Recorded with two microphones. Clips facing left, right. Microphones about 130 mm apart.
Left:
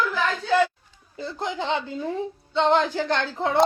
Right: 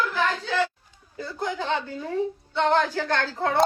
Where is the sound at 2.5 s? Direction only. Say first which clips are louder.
Left 2 dB; 20° left (ahead or behind).